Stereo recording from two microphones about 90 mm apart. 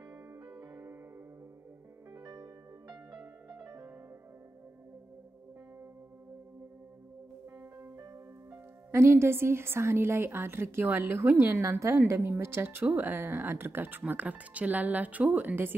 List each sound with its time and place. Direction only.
0.5 s music: 30° right (ahead or behind)
2.1 s music: 30° right (ahead or behind)
3.6 s music: 35° right (ahead or behind)
7.8 s speech: 35° right (ahead or behind)